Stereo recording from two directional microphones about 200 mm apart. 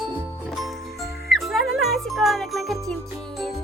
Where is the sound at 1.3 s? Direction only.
Centre (ahead or behind).